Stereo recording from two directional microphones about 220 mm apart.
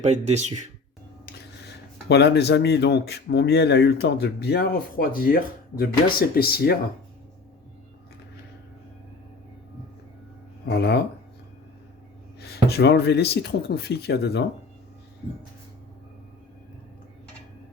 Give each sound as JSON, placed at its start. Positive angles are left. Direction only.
{"t": 0.0, "sound": "speech", "side_deg": -30}
{"t": 1.2, "sound": "speech", "side_deg": 50}
{"t": 10.7, "sound": "speech", "side_deg": 50}
{"t": 12.4, "sound": "speech", "side_deg": 45}